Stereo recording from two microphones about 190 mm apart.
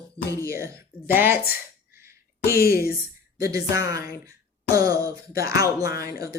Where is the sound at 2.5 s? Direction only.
55° left (ahead or behind).